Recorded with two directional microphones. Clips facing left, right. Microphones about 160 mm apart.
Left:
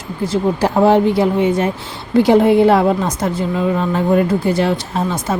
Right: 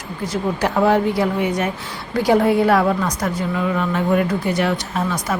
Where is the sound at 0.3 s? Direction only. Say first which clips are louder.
Left 5 dB; 30° left (ahead or behind).